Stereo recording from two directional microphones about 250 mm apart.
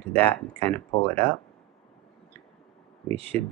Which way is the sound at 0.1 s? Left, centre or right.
Centre.